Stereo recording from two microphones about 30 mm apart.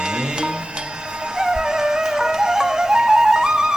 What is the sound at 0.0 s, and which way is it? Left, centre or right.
Music, right.